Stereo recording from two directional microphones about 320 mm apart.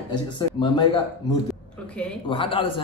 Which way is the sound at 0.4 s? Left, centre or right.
Centre.